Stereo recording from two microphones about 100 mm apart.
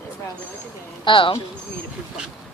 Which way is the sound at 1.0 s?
55° left (ahead or behind).